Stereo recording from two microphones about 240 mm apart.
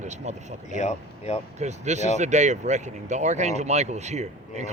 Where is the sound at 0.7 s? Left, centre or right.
Left.